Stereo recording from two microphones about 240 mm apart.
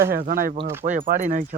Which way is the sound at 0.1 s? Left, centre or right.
Right.